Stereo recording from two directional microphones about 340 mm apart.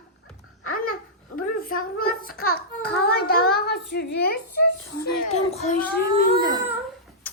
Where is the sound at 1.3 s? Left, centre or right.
Left.